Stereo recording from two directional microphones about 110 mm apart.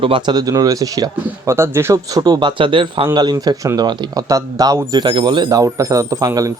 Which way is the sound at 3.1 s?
40° right (ahead or behind).